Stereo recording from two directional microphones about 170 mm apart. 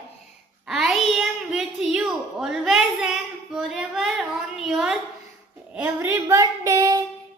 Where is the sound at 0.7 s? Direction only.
Centre (ahead or behind).